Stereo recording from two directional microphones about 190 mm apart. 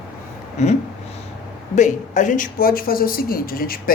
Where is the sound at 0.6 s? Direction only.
35° left (ahead or behind).